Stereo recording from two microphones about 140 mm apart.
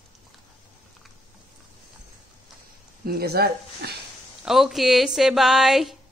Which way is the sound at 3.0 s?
90° right.